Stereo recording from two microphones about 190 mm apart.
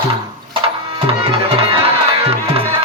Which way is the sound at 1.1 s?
30° right (ahead or behind).